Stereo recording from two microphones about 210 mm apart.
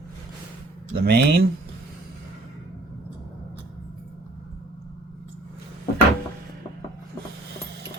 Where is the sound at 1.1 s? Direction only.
50° right (ahead or behind).